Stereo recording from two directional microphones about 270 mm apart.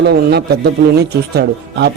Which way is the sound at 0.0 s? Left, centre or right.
Right.